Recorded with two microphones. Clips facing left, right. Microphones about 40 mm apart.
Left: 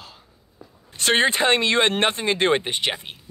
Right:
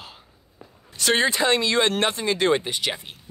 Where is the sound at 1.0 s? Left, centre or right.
Left.